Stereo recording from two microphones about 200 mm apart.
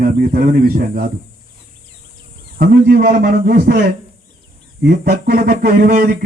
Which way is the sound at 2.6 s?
50° right (ahead or behind).